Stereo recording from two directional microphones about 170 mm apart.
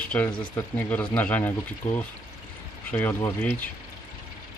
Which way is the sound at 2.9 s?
10° left (ahead or behind).